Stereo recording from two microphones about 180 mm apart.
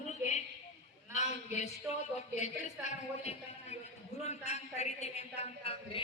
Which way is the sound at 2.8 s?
35° left (ahead or behind).